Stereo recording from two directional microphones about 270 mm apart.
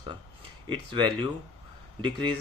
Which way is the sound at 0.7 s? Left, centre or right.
Centre.